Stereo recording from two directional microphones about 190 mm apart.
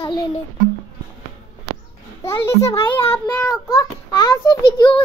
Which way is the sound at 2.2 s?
15° left (ahead or behind).